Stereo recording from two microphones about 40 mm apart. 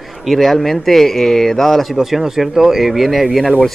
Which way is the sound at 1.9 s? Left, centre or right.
Centre.